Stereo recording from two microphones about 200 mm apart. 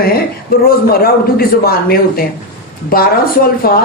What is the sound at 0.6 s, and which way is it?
A man's voice, 50° left (ahead or behind).